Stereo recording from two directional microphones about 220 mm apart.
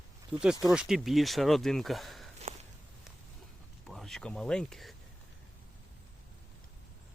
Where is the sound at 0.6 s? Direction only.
Centre (ahead or behind).